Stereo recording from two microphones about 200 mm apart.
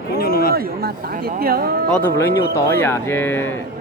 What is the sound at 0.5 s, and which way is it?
Speech, 50° right (ahead or behind).